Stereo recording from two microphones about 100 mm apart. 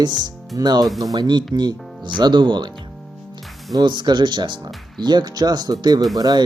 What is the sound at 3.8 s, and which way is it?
Speech, 50° right (ahead or behind).